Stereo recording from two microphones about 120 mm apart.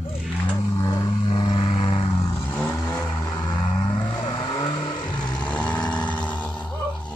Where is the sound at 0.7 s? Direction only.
25° left (ahead or behind).